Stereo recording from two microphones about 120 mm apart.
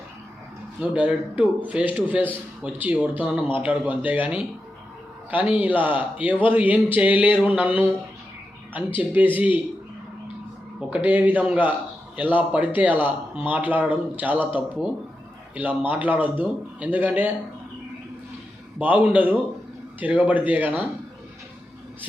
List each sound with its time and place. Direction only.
0.8 s speech: 10° right (ahead or behind)
10.8 s speech: 10° right (ahead or behind)
15.9 s speech: 15° right (ahead or behind)
18.8 s speech: 10° right (ahead or behind)